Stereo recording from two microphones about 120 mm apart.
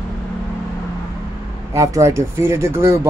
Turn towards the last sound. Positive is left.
turn(degrees=-20)  # may be behind; listen again after turning